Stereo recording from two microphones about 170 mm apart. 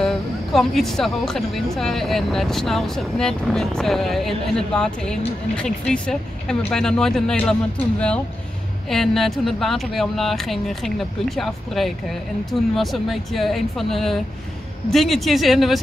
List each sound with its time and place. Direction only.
0.0 s speech: centre (ahead or behind)
8.9 s speech: centre (ahead or behind)